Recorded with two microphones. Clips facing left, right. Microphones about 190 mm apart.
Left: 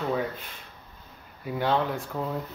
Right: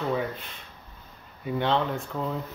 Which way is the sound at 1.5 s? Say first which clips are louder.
Even; 5° left (ahead or behind).